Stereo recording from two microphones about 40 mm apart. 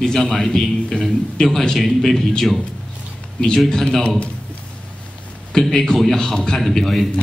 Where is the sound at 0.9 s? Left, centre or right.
Centre.